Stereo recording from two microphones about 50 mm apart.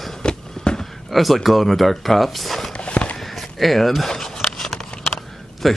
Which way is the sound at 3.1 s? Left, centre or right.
Centre.